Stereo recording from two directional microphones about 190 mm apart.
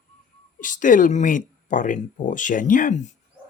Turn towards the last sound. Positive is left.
turn(degrees=45)  # may be behind; listen again after turning